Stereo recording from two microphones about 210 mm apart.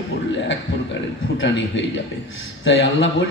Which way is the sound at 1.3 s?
60° left (ahead or behind).